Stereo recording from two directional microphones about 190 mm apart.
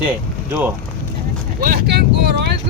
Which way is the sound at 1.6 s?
55° right (ahead or behind).